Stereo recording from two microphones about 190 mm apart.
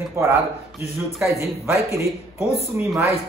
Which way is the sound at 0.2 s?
15° right (ahead or behind).